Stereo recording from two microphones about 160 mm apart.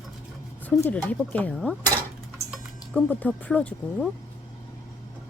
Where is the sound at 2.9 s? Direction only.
10° left (ahead or behind).